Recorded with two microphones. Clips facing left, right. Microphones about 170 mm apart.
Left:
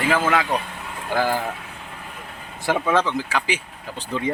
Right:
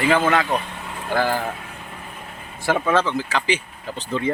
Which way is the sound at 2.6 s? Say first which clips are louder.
Right 1 dB; 15° left (ahead or behind).